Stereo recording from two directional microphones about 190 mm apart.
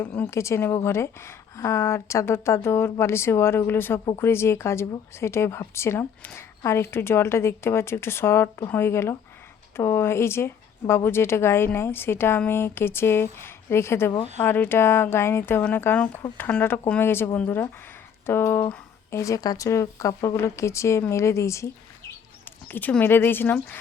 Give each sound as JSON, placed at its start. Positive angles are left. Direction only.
{"t": 0.0, "sound": "speech", "side_deg": 10}